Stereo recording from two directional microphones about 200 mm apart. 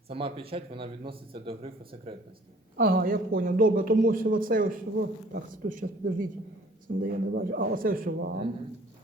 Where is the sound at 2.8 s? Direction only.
45° right (ahead or behind).